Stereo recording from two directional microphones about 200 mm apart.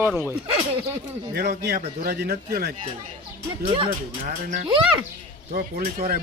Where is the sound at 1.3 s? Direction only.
55° right (ahead or behind).